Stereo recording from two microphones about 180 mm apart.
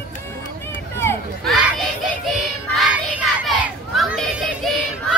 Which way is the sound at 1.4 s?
Centre (ahead or behind).